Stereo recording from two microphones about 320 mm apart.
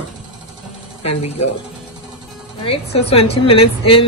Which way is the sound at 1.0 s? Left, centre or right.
Centre.